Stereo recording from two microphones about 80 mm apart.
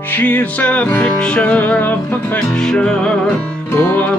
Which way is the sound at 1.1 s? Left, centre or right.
Centre.